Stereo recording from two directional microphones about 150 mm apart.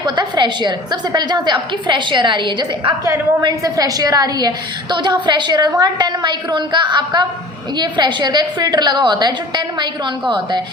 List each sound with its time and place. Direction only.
0.2 s a woman's voice: 30° right (ahead or behind)
3.0 s a woman's voice: 20° right (ahead or behind)